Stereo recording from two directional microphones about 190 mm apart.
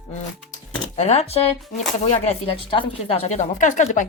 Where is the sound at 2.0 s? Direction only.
35° left (ahead or behind).